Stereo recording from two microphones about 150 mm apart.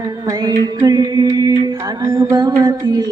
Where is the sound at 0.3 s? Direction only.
25° right (ahead or behind).